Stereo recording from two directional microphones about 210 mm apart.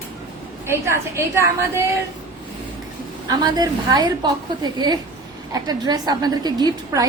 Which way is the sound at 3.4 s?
20° right (ahead or behind).